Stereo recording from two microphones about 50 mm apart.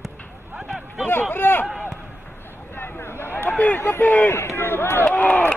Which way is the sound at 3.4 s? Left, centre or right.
Left.